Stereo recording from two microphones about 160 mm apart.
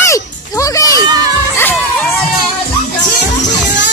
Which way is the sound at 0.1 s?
20° left (ahead or behind).